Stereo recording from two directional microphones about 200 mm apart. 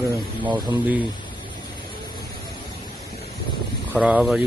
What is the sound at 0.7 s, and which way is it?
Speech, 10° right (ahead or behind).